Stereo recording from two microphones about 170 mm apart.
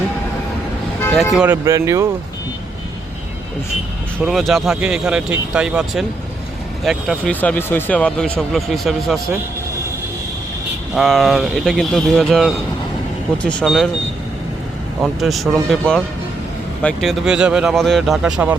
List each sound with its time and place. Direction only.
1.1 s speech: centre (ahead or behind)
1.5 s speech: 15° right (ahead or behind)
4.2 s speech: centre (ahead or behind)
10.9 s speech: centre (ahead or behind)
15.0 s speech: centre (ahead or behind)